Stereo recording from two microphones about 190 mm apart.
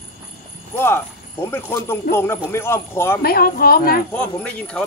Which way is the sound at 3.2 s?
55° left (ahead or behind).